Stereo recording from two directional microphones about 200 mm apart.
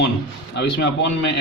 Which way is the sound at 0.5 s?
60° left (ahead or behind).